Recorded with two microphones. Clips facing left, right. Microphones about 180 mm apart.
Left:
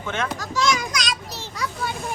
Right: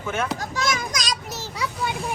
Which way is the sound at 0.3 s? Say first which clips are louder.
Left 3 dB; 50° right (ahead or behind).